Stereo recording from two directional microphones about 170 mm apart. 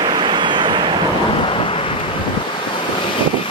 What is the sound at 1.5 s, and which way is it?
Vehicle, 35° left (ahead or behind).